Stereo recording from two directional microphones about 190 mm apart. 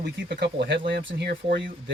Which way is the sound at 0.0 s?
60° right (ahead or behind).